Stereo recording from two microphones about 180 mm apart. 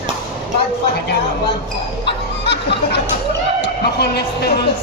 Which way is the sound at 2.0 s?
70° left (ahead or behind).